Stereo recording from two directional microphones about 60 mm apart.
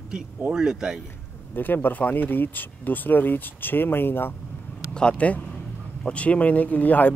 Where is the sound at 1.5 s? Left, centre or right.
Left.